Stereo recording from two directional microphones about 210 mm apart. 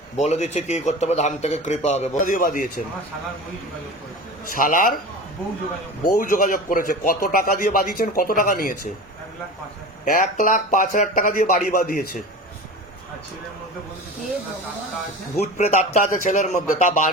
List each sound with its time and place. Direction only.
0.2 s speech: 35° left (ahead or behind)
4.5 s a man's voice: 40° left (ahead or behind)
6.1 s a man's voice: 40° left (ahead or behind)
10.1 s speech: 40° left (ahead or behind)
15.4 s speech: 35° left (ahead or behind)